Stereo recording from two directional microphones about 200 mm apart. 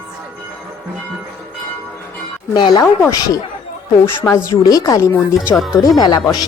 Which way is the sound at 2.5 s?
20° left (ahead or behind).